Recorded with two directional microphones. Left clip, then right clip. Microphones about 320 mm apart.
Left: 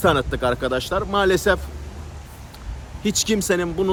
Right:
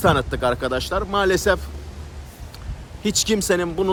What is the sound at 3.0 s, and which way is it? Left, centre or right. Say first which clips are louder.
Speech: right 1 dB; centre.